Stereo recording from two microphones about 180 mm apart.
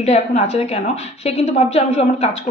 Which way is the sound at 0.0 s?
40° left (ahead or behind).